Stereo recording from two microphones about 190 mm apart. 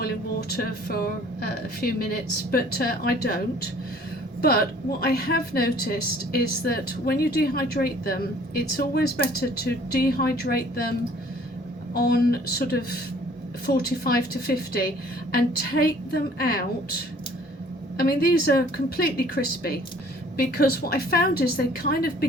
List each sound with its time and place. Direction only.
0.5 s a woman's voice: 50° left (ahead or behind)
11.9 s a woman's voice: 55° left (ahead or behind)
17.9 s a woman's voice: 55° left (ahead or behind)